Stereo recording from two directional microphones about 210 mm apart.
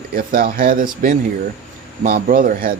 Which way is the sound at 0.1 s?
45° right (ahead or behind).